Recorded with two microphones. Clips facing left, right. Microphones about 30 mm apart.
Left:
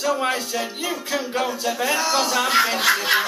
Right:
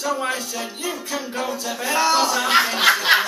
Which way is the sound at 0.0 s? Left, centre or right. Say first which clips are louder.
Left 2 dB; centre.